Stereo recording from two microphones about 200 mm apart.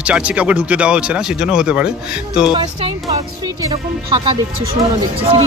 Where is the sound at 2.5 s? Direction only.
30° right (ahead or behind).